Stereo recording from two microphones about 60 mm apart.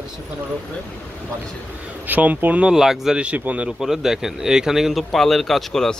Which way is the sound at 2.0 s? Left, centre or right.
Right.